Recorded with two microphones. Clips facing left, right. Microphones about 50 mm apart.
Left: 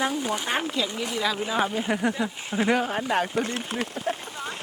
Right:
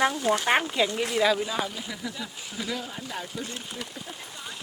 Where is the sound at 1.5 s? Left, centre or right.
Left.